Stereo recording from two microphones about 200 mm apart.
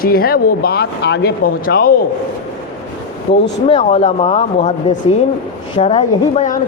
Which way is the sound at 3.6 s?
30° left (ahead or behind).